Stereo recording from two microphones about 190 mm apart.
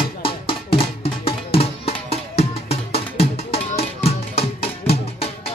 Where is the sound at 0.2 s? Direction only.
30° left (ahead or behind).